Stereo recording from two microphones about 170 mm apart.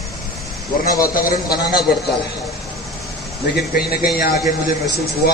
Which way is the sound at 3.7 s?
65° left (ahead or behind).